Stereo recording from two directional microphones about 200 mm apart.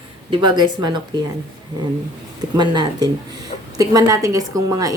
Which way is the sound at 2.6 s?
20° right (ahead or behind).